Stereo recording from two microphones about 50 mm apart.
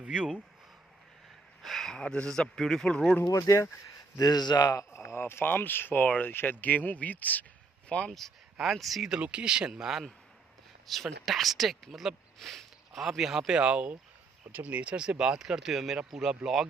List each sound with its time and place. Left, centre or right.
0.0 s speech: right
1.6 s a sound: centre
2.0 s a man's voice: centre
3.3 s speech: left
4.9 s a sound: left
5.2 s speech: left
6.0 s speech: left
7.9 s speech: left
8.6 s speech: centre
9.2 s speech: centre
10.9 s speech: centre
12.4 s a sound: centre
13.0 s speech: centre
13.5 s speech: right